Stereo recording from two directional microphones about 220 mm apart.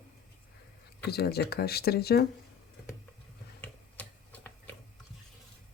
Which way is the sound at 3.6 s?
5° left (ahead or behind).